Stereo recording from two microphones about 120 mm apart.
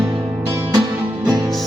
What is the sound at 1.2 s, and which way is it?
Music, 20° right (ahead or behind).